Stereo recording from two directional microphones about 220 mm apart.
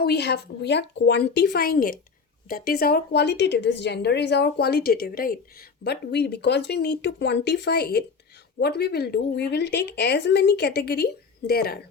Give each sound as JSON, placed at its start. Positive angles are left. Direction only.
{"t": 0.0, "sound": "a woman's voice", "side_deg": 50}